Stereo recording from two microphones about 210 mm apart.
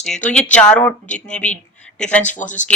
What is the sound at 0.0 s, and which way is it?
Speech, 5° left (ahead or behind).